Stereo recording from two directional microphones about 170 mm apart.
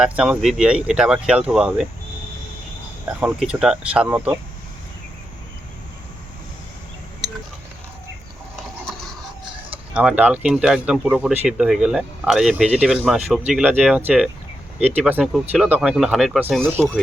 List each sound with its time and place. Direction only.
0.0 s speech: 5° right (ahead or behind)
3.1 s speech: 10° right (ahead or behind)
9.4 s chicken: 30° right (ahead or behind)
9.9 s speech: 5° right (ahead or behind)